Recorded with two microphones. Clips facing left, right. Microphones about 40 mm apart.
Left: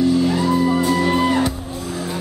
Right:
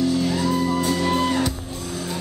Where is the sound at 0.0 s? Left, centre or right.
Centre.